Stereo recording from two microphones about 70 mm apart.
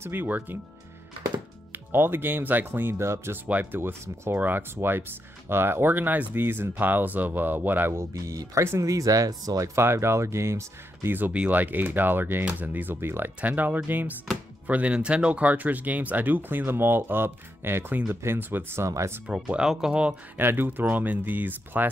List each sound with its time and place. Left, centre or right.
0.0 s speech: right
1.9 s speech: right
3.4 s speech: right
7.9 s speech: right
9.8 s speech: right
11.3 s speech: right
13.4 s speech: right
18.9 s speech: right
19.2 s speech: centre
20.3 s speech: right